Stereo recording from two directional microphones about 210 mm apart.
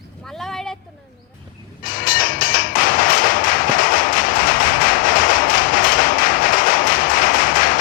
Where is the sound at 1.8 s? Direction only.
40° left (ahead or behind).